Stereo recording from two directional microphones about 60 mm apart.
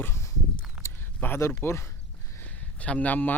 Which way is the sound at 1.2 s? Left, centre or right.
Left.